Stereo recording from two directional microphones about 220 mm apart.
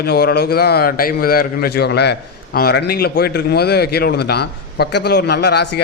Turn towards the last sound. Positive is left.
turn(degrees=50)  # may be behind; listen again after turning